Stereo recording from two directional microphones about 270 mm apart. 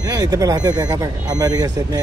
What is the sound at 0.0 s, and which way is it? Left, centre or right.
Speech, centre.